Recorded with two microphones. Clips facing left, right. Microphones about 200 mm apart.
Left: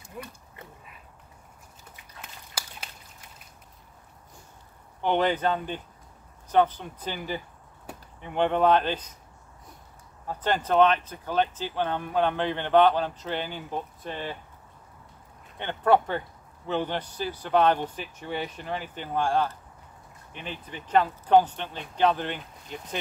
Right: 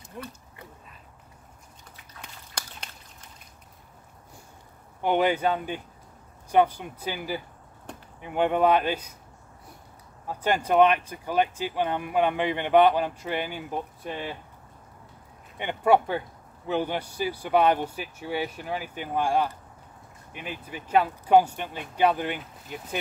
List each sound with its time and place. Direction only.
2.2 s a sound: 5° left (ahead or behind)
5.0 s speech: 10° right (ahead or behind)
10.2 s speech: 10° right (ahead or behind)
15.5 s speech: 10° right (ahead or behind)